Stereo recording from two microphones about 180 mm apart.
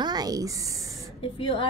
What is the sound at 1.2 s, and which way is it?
Speech, 30° left (ahead or behind).